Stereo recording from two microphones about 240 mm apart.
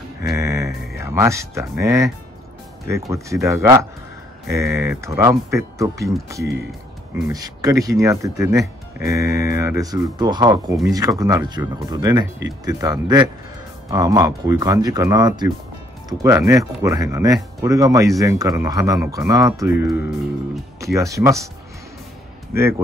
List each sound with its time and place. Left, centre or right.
0.2 s music: centre
0.9 s speech: centre
3.1 s speech: centre
7.2 s speech: centre
22.5 s speech: centre